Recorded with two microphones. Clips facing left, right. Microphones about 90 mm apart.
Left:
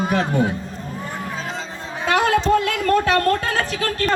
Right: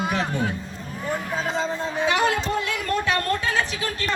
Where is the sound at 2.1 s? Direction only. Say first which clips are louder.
Left 5 dB; 55° left (ahead or behind).